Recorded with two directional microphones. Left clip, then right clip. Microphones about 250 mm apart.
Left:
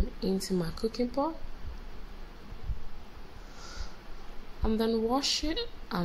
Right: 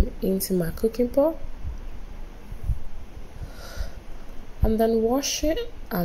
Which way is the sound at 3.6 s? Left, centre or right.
Centre.